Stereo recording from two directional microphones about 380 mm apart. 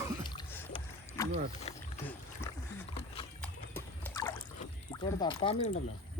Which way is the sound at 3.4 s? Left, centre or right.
Centre.